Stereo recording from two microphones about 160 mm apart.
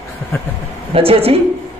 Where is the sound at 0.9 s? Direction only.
35° right (ahead or behind).